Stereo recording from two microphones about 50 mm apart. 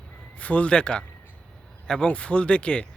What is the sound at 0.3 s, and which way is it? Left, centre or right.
Speech, left.